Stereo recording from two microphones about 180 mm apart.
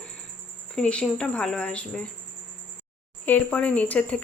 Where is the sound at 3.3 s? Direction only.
5° left (ahead or behind).